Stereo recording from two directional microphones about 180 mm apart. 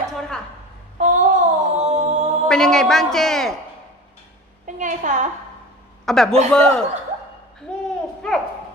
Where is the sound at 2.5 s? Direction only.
5° left (ahead or behind).